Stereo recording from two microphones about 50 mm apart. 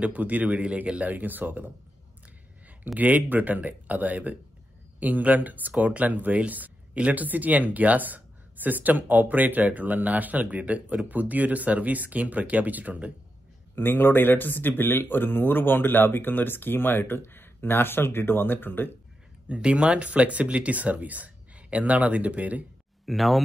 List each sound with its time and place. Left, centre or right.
0.0 s speech: right
3.0 s speech: right
13.7 s speech: left
19.5 s speech: right
23.0 s speech: centre